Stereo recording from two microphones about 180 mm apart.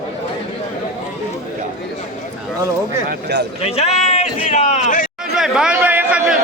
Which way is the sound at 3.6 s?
35° left (ahead or behind).